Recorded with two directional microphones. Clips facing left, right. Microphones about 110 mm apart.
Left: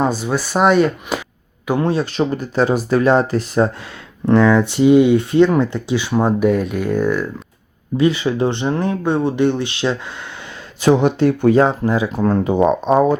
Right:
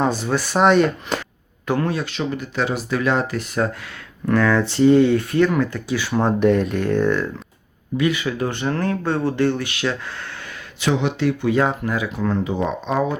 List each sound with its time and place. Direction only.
0.0 s speech: 5° left (ahead or behind)
1.9 s speech: 35° left (ahead or behind)
4.3 s speech: 20° left (ahead or behind)
6.1 s speech: 5° left (ahead or behind)
7.9 s speech: 30° left (ahead or behind)
10.8 s speech: 40° left (ahead or behind)
12.1 s speech: 40° left (ahead or behind)